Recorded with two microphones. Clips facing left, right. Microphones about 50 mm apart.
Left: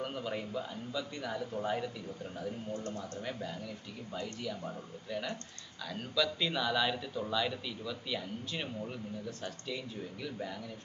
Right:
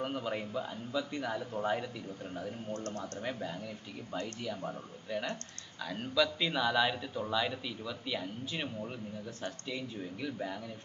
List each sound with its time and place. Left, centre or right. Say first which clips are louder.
0.0 s speech: right 2 dB; centre
2.7 s speech: even; right
3.0 s speech: right 2 dB; right